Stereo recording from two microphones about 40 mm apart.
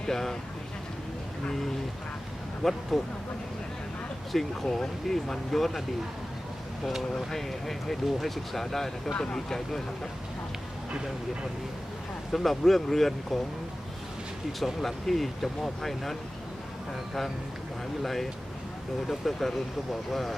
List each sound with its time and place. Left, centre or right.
0.0 s speech: centre
2.6 s speech: centre
4.3 s speech: centre
7.3 s speech: centre
9.1 s speech: left
9.5 s speech: centre
12.3 s speech: centre
14.6 s speech: centre
18.0 s speech: centre